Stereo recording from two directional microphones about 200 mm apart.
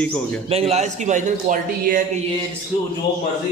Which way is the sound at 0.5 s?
30° right (ahead or behind).